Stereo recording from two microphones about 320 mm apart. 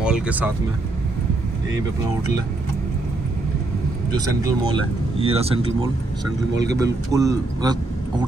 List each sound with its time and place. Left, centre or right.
0.0 s speech: centre
4.4 s speech: centre
6.8 s speech: centre